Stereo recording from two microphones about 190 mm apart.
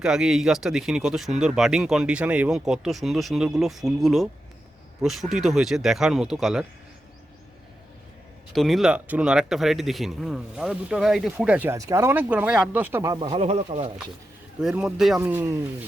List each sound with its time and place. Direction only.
0.0 s speech: centre (ahead or behind)
8.5 s speech: centre (ahead or behind); by 13.2 s 15° right (ahead or behind)
13.2 s speech: 30° right (ahead or behind)
14.6 s speech: 5° right (ahead or behind)